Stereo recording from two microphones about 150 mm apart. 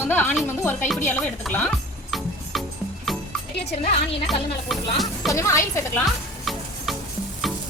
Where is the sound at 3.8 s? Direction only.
40° left (ahead or behind).